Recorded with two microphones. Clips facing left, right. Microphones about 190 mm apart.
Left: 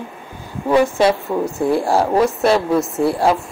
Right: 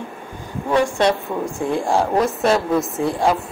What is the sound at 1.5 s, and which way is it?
Speech, 35° left (ahead or behind).